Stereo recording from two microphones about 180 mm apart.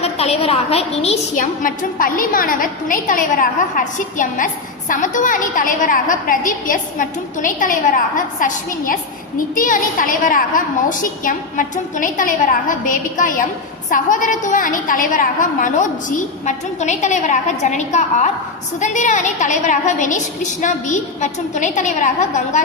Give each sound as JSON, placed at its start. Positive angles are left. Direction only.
{"t": 0.0, "sound": "a woman's voice", "side_deg": 35}
{"t": 1.6, "sound": "a woman's voice", "side_deg": 50}